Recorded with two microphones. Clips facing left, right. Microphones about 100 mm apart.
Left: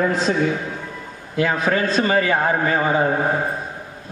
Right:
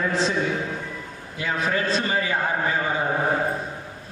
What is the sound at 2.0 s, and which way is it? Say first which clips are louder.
A man's voice: left 6 dB; 60° left (ahead or behind).